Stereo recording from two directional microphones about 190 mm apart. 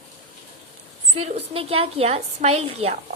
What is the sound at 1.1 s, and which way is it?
A woman's voice, 30° right (ahead or behind).